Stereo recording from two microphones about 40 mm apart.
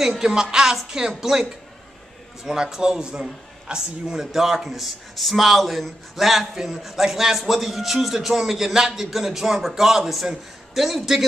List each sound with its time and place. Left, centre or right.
0.2 s a man's voice: centre
4.3 s a man's voice: centre